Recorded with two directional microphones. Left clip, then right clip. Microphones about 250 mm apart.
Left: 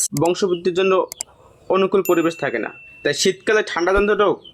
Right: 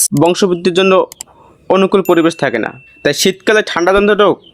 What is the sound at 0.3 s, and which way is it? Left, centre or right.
Speech, right.